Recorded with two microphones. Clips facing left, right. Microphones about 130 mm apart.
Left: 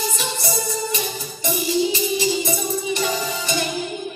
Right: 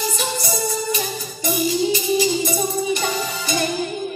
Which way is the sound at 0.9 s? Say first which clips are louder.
Right 1 dB; 40° right (ahead or behind).